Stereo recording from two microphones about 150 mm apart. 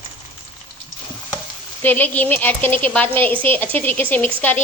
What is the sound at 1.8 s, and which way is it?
A woman's voice, 10° left (ahead or behind).